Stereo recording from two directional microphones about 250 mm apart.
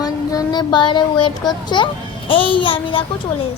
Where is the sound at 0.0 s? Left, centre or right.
Centre.